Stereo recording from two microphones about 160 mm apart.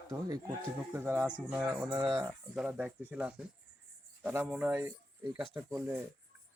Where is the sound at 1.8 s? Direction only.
25° right (ahead or behind).